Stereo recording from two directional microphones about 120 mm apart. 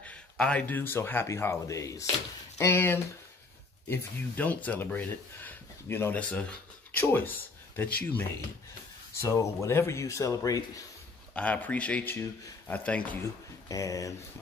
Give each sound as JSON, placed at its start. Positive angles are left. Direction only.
{"t": 0.0, "sound": "speech", "side_deg": 10}
{"t": 9.2, "sound": "speech", "side_deg": 25}
{"t": 11.3, "sound": "speech", "side_deg": 10}
{"t": 13.7, "sound": "speech", "side_deg": 30}